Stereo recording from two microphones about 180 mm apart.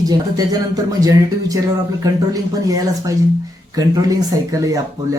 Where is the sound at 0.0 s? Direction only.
20° right (ahead or behind).